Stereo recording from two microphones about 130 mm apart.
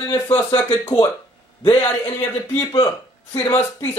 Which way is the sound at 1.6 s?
30° left (ahead or behind).